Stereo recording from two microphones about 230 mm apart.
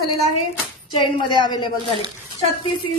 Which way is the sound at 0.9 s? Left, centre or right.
Centre.